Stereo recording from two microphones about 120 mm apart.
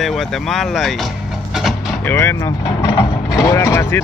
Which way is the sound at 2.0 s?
20° left (ahead or behind).